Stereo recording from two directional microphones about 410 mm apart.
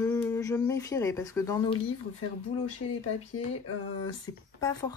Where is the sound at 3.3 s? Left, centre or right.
Left.